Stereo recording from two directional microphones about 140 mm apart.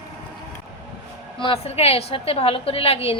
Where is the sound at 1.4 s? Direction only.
45° left (ahead or behind).